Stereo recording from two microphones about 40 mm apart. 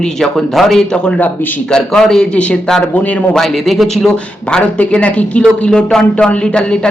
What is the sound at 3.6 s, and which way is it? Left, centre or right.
Speech, centre.